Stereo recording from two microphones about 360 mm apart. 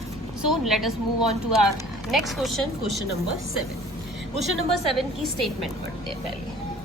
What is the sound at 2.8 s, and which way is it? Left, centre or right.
Speech, right.